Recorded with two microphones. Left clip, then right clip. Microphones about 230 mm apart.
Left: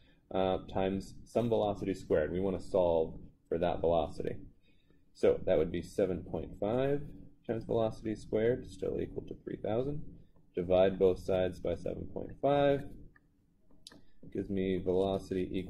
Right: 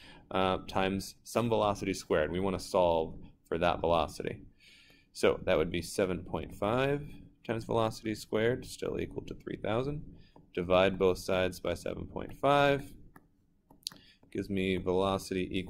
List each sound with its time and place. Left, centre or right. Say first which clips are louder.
0.3 s speech: right 2 dB; centre
2.8 s speech: right 2 dB; right
3.4 s speech: right 2 dB; centre
13.8 s a sound: right 11 dB; centre
15.0 s speech: right 2 dB; centre